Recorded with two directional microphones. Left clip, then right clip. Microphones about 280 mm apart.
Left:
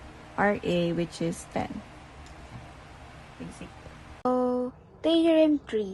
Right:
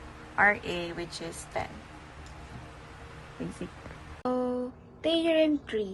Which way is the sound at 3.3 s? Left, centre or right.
Centre.